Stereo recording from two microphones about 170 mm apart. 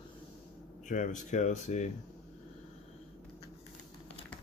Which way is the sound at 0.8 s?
50° left (ahead or behind).